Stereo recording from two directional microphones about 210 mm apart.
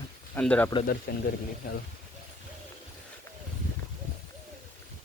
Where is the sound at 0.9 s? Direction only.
50° left (ahead or behind).